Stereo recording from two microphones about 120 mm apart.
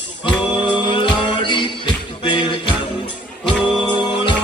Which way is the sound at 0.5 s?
40° left (ahead or behind).